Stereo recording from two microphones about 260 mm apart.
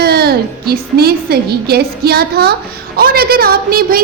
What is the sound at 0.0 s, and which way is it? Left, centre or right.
A woman's voice, right.